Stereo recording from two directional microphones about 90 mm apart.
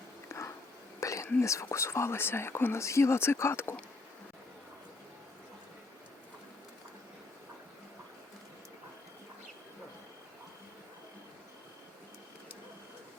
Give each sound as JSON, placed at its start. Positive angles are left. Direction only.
{"t": 0.3, "sound": "a sound", "side_deg": 35}
{"t": 0.9, "sound": "whispering", "side_deg": 35}
{"t": 1.4, "sound": "speech", "side_deg": 35}